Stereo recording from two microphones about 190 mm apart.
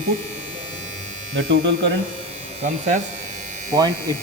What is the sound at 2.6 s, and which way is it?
Speech, 40° right (ahead or behind).